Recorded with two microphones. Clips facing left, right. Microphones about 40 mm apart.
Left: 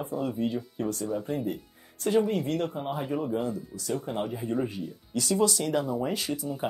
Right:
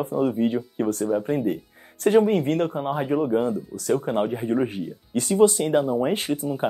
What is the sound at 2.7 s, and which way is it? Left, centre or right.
Speech, right.